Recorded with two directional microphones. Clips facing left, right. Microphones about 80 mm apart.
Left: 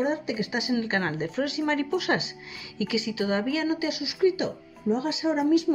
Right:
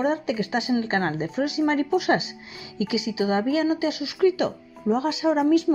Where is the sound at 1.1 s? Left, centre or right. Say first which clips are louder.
Right 3 dB; centre; by 4.1 s right.